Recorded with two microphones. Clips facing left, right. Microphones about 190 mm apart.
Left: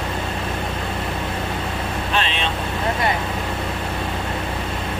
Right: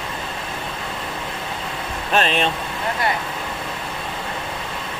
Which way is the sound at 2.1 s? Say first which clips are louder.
Right 6 dB; 45° right (ahead or behind).